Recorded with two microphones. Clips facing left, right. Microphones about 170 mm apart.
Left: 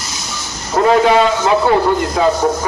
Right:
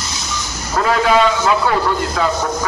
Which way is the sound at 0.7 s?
25° left (ahead or behind).